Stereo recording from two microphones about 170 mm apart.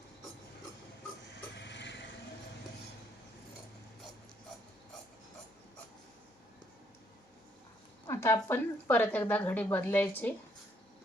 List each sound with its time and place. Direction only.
1.5 s vehicle: 90° left
8.0 s a woman's voice: 15° left (ahead or behind)